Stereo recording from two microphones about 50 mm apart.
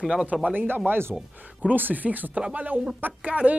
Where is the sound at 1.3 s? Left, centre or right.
Right.